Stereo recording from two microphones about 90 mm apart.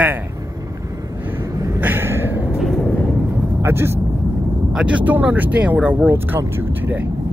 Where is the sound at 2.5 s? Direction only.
Centre (ahead or behind).